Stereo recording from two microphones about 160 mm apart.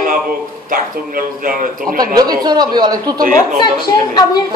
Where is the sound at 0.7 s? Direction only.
60° right (ahead or behind).